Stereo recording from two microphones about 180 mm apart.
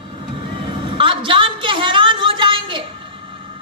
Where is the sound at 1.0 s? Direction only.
30° right (ahead or behind).